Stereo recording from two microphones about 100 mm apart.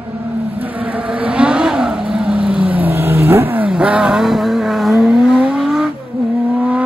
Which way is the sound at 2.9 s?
25° right (ahead or behind).